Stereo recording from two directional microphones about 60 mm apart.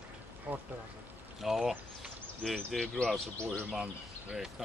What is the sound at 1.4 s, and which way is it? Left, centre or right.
Speech, centre.